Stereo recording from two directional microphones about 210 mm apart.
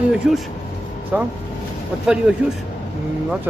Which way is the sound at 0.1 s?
Centre (ahead or behind).